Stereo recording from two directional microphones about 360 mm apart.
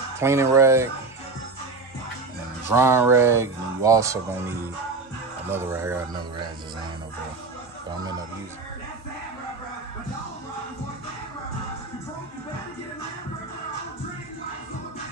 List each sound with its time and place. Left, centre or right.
0.2 s speech: centre
2.7 s speech: centre